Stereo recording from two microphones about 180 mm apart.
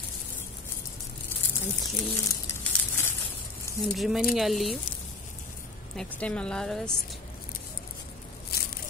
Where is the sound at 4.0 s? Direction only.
Centre (ahead or behind).